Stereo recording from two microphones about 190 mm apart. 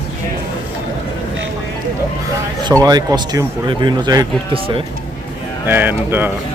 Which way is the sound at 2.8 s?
20° right (ahead or behind).